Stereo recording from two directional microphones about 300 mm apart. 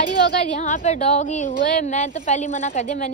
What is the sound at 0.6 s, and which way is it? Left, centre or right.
A woman's voice, left.